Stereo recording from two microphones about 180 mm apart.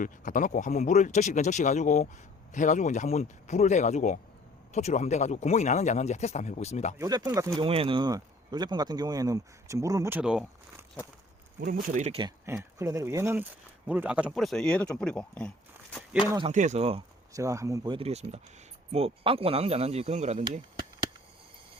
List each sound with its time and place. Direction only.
0.0 s speech: 45° left (ahead or behind)
7.0 s speech: 20° right (ahead or behind)
7.6 s speech: 30° right (ahead or behind); by 10.8 s 5° right (ahead or behind)
11.6 s speech: 50° right (ahead or behind)
12.5 s speech: 15° right (ahead or behind); by 16.0 s 5° left (ahead or behind)
16.5 s speech: 40° right (ahead or behind)
17.3 s speech: 15° right (ahead or behind); by 20.4 s 40° right (ahead or behind)